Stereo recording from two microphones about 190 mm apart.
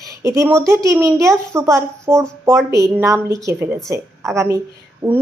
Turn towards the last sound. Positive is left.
turn(degrees=-25)  # may be behind; listen again after turning